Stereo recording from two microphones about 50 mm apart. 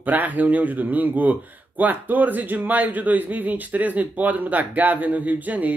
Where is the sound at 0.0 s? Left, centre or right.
Right.